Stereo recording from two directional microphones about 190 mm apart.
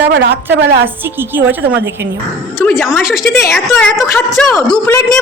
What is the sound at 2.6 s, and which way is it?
A woman's voice, 10° left (ahead or behind).